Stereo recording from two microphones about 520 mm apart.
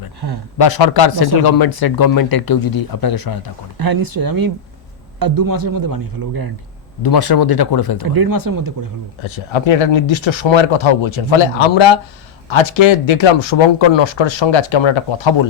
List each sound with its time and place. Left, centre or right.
0.2 s speech: right
0.6 s speech: left
3.8 s a man's voice: right
7.0 s speech: left
8.0 s a man's voice: right
9.2 s speech: left